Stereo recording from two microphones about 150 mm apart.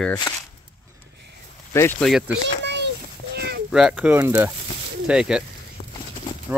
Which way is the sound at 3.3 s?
90° right.